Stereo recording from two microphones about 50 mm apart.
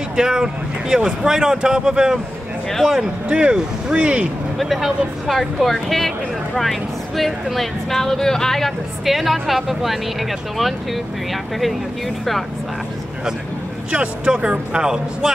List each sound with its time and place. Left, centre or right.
0.1 s speech: centre
2.7 s speech: centre
3.0 s speech: centre
4.6 s speech: centre
13.9 s speech: right